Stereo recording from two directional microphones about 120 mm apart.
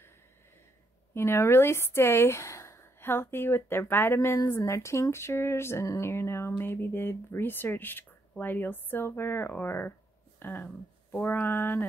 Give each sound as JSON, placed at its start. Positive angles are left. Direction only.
{"t": 1.1, "sound": "speech", "side_deg": 20}